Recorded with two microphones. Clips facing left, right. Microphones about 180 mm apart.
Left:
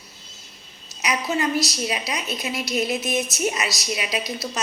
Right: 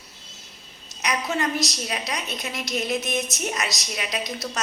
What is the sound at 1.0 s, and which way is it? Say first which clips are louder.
A woman's voice: left 2 dB; 5° left (ahead or behind).